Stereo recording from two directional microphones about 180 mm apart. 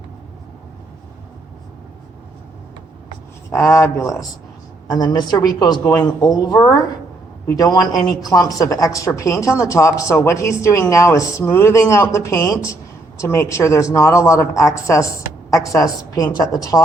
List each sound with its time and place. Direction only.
3.5 s a woman's voice: 15° left (ahead or behind)